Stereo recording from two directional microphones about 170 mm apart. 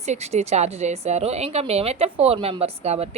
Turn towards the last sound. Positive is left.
turn(degrees=-35)  # may be behind; listen again after turning